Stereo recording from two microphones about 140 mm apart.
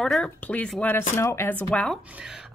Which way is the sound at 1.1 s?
20° left (ahead or behind).